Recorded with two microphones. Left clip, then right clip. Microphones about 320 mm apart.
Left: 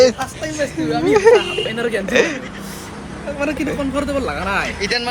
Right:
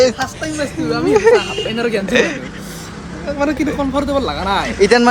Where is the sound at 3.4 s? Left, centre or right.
Centre.